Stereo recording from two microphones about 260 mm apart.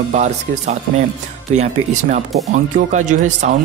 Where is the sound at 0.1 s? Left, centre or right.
Right.